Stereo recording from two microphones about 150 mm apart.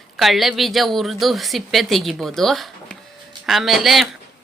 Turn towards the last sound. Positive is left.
turn(degrees=0)  # may be behind; listen again after turning